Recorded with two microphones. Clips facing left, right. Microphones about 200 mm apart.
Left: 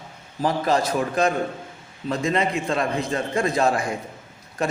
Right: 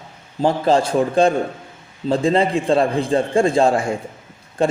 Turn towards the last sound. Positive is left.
turn(degrees=-30)  # may be behind; listen again after turning